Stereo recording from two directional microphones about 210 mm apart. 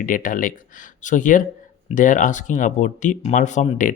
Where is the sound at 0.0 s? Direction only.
40° left (ahead or behind).